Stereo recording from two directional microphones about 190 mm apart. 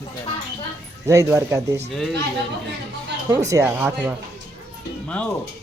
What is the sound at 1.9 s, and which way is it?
Speech, centre (ahead or behind).